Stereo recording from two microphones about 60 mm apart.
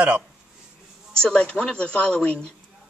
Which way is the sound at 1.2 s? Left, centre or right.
Centre.